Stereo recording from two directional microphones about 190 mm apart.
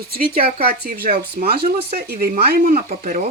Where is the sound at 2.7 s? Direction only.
40° right (ahead or behind).